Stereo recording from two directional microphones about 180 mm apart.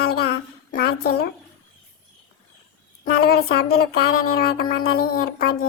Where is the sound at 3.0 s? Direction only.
60° left (ahead or behind).